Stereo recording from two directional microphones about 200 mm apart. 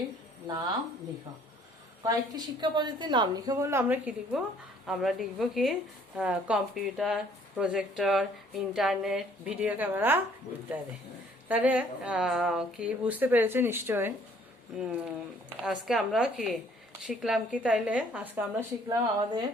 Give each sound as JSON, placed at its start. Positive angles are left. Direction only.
{"t": 0.4, "sound": "a woman's voice", "side_deg": -20}
{"t": 2.0, "sound": "a woman's voice", "side_deg": -20}
{"t": 11.4, "sound": "a woman's voice", "side_deg": -5}
{"t": 18.9, "sound": "a woman's voice", "side_deg": -20}